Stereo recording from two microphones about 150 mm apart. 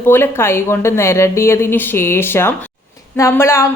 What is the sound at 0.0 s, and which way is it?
A woman's voice, 15° left (ahead or behind).